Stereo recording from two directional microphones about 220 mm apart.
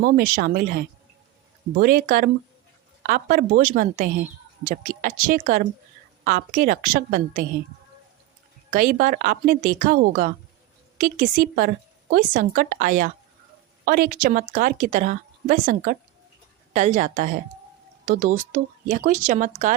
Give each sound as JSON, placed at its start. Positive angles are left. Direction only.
{"t": 0.0, "sound": "speech", "side_deg": -45}
{"t": 1.7, "sound": "a woman's voice", "side_deg": -40}
{"t": 8.7, "sound": "a woman's voice", "side_deg": -40}